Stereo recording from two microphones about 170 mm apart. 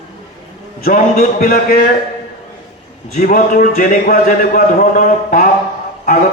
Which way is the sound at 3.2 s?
55° left (ahead or behind).